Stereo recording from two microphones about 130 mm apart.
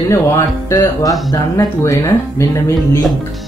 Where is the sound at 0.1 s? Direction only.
25° left (ahead or behind).